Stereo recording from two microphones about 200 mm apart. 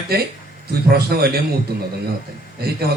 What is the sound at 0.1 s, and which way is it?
A man's voice, 50° right (ahead or behind).